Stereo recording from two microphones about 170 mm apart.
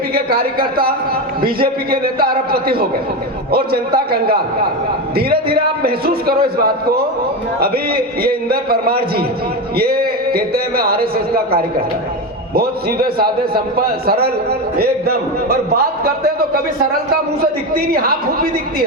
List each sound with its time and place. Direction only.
0.1 s a man's voice: 60° right (ahead or behind)
17.4 s a man's voice: 60° right (ahead or behind)